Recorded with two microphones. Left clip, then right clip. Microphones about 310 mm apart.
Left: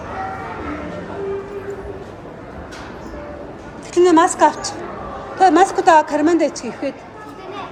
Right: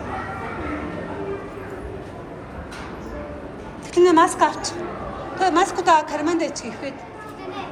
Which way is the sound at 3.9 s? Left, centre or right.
Centre.